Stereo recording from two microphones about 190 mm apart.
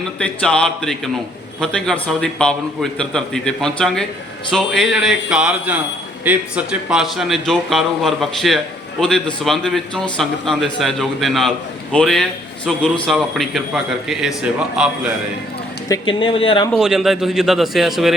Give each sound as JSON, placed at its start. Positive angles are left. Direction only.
{"t": 0.2, "sound": "a man's voice", "side_deg": 5}
{"t": 15.9, "sound": "speech", "side_deg": 25}
{"t": 16.7, "sound": "a man's voice", "side_deg": 0}